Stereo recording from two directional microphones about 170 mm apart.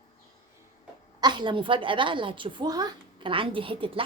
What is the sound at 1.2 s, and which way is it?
A woman's voice, 25° right (ahead or behind).